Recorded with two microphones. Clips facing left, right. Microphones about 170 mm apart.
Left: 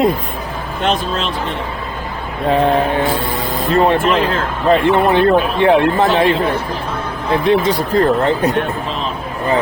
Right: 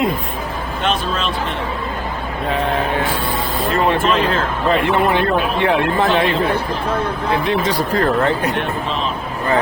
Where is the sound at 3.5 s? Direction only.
35° left (ahead or behind).